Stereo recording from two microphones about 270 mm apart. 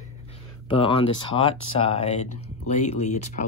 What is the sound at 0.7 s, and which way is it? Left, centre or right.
Speech, centre.